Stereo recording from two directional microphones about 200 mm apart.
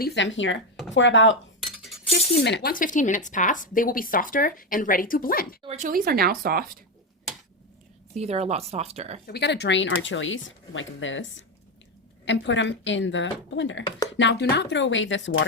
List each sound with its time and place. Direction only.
0.0 s speech: 60° left (ahead or behind)
2.4 s speech: 60° left (ahead or behind)
5.6 s speech: 35° right (ahead or behind)
6.1 s speech: 50° right (ahead or behind)
8.1 s speech: 30° right (ahead or behind)
9.2 s speech: 55° left (ahead or behind)